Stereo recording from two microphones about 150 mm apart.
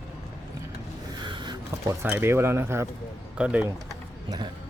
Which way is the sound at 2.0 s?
15° right (ahead or behind).